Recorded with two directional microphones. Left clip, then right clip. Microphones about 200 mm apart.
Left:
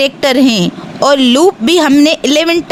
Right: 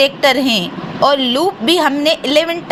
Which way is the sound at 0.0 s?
40° left (ahead or behind).